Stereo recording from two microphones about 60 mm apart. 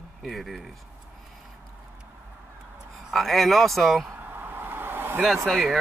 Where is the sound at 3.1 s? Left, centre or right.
Centre.